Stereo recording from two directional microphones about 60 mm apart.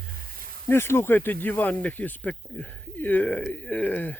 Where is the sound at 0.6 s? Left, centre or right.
Left.